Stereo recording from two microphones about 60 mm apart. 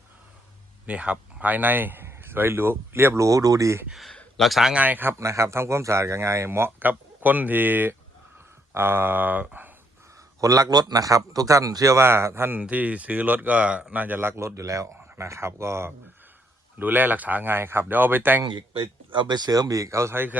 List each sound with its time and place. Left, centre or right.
0.9 s a man's voice: right
3.2 s a man's voice: right
4.4 s speech: centre
4.7 s speech: right
5.1 s speech: right
6.7 s speech: right
8.7 s speech: right
10.4 s a man's voice: right
11.9 s speech: right
12.6 s speech: right
15.2 s speech: right
16.7 s speech: right
19.5 s speech: right
20.1 s speech: right